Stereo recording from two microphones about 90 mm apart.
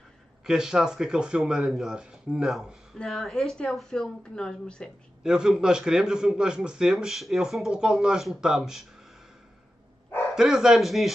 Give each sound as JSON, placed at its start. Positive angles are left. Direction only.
{"t": 0.5, "sound": "a man's voice", "side_deg": -5}
{"t": 5.2, "sound": "a man's voice", "side_deg": -5}
{"t": 10.3, "sound": "speech", "side_deg": -5}